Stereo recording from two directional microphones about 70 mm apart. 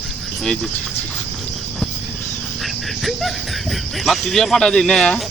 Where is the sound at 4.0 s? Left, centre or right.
Centre.